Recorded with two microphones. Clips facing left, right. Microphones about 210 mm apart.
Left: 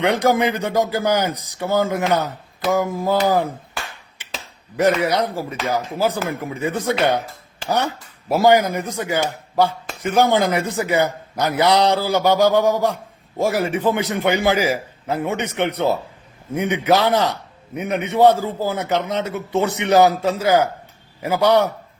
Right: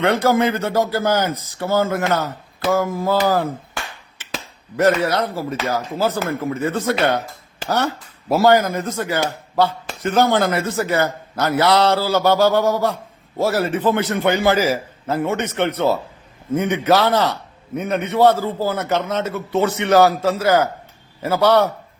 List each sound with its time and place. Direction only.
0.0 s speech: 15° left (ahead or behind)
4.8 s speech: 15° left (ahead or behind)